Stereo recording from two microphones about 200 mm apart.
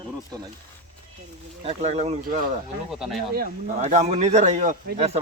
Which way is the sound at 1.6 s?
30° right (ahead or behind).